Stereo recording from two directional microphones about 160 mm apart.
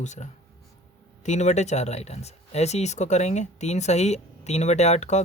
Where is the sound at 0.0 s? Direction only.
50° left (ahead or behind).